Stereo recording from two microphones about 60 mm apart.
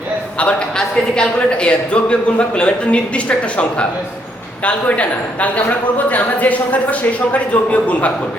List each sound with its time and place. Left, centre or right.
0.3 s a man's voice: centre